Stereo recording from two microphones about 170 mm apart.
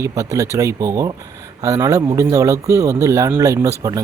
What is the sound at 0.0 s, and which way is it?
Speech, 20° right (ahead or behind).